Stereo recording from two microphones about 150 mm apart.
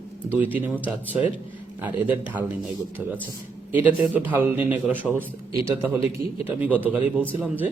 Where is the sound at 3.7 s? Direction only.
10° right (ahead or behind).